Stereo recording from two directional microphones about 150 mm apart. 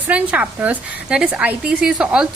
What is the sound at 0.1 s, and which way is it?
A woman's voice, 10° right (ahead or behind).